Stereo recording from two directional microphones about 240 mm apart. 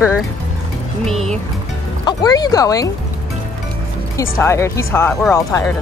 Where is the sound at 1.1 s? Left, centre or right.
Centre.